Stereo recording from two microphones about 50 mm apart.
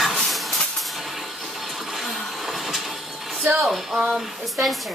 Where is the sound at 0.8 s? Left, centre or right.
Centre.